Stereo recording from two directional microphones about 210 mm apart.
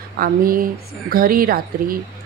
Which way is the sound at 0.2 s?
45° right (ahead or behind).